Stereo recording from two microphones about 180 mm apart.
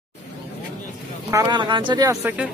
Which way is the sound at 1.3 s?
25° right (ahead or behind).